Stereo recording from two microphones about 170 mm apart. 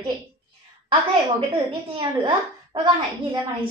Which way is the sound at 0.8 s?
30° right (ahead or behind).